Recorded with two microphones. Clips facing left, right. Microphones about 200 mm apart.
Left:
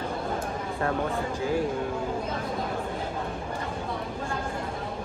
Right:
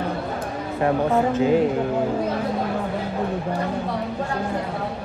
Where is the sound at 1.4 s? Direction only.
20° right (ahead or behind).